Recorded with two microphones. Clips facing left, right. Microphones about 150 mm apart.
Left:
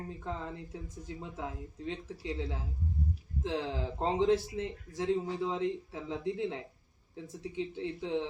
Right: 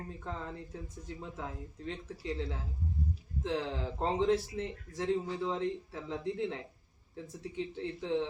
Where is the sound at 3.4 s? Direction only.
Centre (ahead or behind).